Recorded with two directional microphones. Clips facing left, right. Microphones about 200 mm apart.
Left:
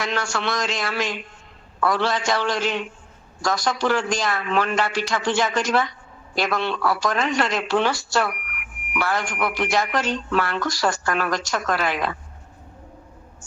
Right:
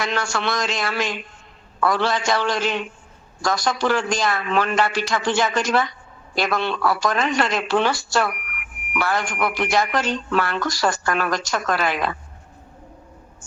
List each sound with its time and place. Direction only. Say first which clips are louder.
0.0 s speech: right 1 dB; 60° right (ahead or behind)